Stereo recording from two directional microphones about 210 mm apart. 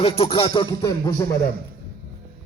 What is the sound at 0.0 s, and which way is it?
Music, 25° left (ahead or behind).